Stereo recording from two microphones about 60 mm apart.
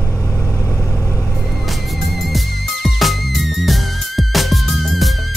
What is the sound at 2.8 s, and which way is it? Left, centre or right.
Music, centre.